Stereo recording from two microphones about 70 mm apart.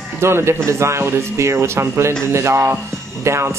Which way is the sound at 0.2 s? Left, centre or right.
Right.